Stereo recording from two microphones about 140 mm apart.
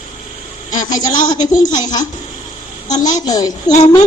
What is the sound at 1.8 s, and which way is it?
A woman's voice, 30° left (ahead or behind).